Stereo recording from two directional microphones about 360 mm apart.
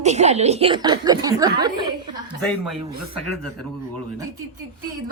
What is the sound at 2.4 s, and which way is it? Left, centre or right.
Speech, centre.